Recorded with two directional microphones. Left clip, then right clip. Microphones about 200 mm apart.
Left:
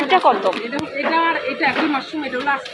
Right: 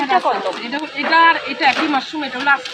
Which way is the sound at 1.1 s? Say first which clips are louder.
Right 7 dB; 30° right (ahead or behind).